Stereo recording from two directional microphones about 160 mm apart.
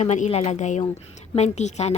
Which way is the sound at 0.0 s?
45° left (ahead or behind).